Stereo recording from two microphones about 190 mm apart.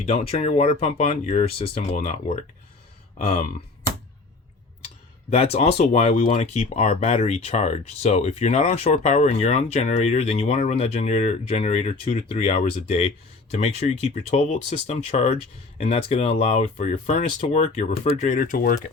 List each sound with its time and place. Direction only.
0.0 s speech: 35° left (ahead or behind)
5.3 s speech: 35° left (ahead or behind); by 18.8 s 50° left (ahead or behind)